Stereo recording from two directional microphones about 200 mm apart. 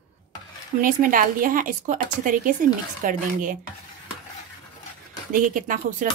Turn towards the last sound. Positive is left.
turn(degrees=-40)  # may be behind; listen again after turning